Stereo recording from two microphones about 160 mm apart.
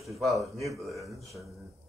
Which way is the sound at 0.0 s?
Centre (ahead or behind).